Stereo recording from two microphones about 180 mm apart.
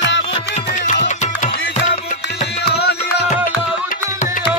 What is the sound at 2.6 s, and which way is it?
Music, 65° left (ahead or behind).